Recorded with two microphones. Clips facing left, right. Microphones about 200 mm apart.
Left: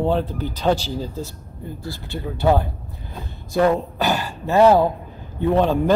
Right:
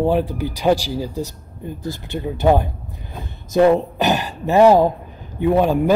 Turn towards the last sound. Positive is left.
turn(degrees=-10)  # may be behind; listen again after turning